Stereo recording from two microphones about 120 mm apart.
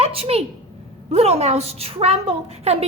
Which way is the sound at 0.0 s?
55° right (ahead or behind).